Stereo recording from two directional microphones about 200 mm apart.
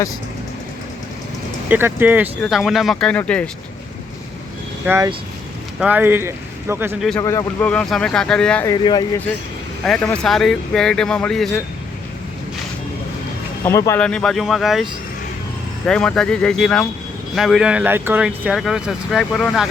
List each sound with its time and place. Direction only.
1.7 s speech: 10° right (ahead or behind); by 3.5 s 5° left (ahead or behind)
4.9 s speech: 15° right (ahead or behind)
7.2 s speech: 15° left (ahead or behind)
8.6 s speech: 20° left (ahead or behind)
9.8 s speech: 5° left (ahead or behind)
13.7 s speech: 15° left (ahead or behind)
15.9 s speech: 5° left (ahead or behind)